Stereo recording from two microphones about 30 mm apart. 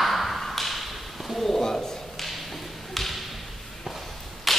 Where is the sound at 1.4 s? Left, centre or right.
Centre.